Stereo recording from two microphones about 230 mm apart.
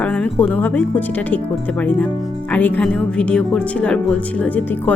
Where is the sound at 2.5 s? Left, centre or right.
Centre.